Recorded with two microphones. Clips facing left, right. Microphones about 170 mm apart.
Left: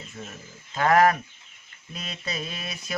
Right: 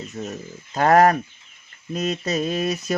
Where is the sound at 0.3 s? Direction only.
40° right (ahead or behind).